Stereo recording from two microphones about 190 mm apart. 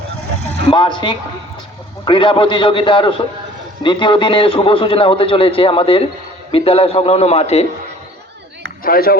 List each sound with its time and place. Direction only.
0.7 s a man's voice: 25° left (ahead or behind)
8.8 s speech: 50° left (ahead or behind)